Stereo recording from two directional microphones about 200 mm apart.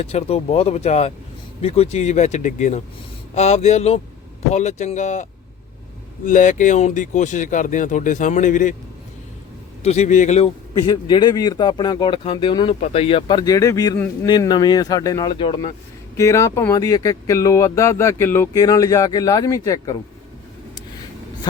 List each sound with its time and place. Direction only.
0.0 s speech: 30° left (ahead or behind)
9.8 s a man's voice: 30° left (ahead or behind)
16.1 s speech: 15° left (ahead or behind)